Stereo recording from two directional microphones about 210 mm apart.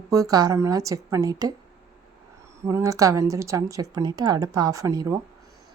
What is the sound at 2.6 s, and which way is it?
Speech, 15° right (ahead or behind).